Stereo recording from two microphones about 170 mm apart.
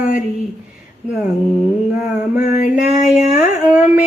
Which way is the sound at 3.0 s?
5° right (ahead or behind).